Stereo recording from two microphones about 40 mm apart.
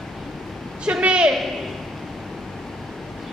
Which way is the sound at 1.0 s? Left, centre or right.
Right.